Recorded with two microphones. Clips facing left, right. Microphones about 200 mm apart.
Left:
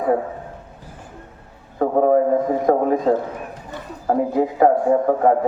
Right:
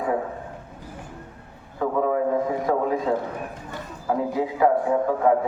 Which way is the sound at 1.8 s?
45° left (ahead or behind).